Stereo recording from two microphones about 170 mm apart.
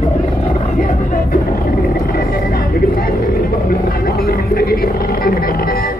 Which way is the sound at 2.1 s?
60° left (ahead or behind).